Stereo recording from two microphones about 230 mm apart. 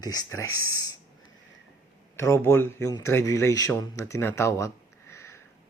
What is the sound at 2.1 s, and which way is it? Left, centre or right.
Speech, centre.